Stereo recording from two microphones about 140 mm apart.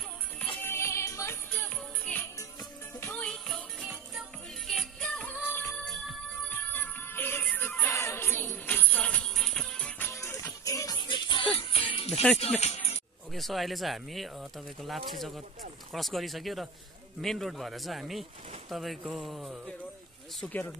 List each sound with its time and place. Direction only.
0.6 s music: 15° left (ahead or behind)
1.5 s music: 10° left (ahead or behind)
3.8 s music: 5° right (ahead or behind); by 12.1 s 40° left (ahead or behind)
12.1 s speech: 5° left (ahead or behind)
12.4 s speech: 50° left (ahead or behind)
13.3 s speech: centre (ahead or behind)
20.3 s speech: 10° left (ahead or behind)